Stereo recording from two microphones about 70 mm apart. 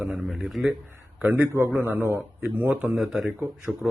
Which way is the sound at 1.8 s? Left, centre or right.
Right.